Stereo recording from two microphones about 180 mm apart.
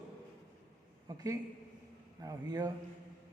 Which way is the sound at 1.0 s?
20° right (ahead or behind).